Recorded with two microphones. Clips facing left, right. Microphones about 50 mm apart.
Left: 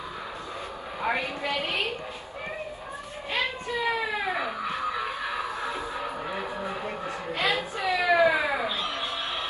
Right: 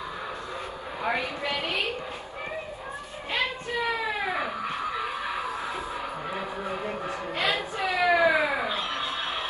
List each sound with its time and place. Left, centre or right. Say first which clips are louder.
1.0 s a woman's voice: even; left
3.8 s baby cry: left 1 dB; right
7.1 s a sound: left 1 dB; right